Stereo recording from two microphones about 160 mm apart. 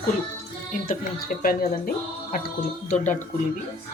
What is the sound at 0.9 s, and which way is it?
Speech, 65° left (ahead or behind).